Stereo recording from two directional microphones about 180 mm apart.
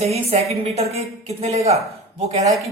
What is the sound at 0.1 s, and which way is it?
Speech, 35° right (ahead or behind).